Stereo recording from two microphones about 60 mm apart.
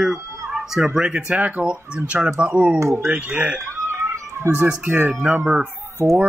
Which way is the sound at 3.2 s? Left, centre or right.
Centre.